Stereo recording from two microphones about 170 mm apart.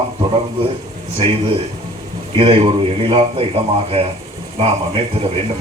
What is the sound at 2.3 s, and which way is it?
Speech, 30° right (ahead or behind).